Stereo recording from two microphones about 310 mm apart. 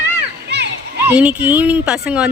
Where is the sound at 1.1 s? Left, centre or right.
Centre.